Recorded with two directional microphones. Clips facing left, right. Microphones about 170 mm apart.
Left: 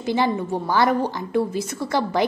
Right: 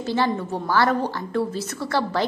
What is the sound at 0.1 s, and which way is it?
A woman's voice, 15° left (ahead or behind).